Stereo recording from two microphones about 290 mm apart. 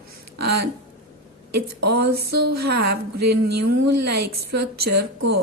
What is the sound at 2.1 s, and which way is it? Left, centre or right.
Speech, right.